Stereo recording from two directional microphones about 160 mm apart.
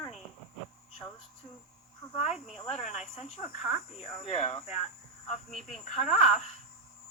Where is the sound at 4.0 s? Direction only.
35° left (ahead or behind).